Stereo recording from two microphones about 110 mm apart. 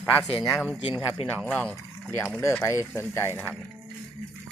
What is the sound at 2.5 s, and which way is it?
Speech, 25° left (ahead or behind).